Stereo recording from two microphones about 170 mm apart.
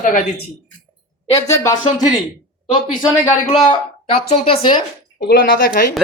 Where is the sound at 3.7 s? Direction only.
35° left (ahead or behind).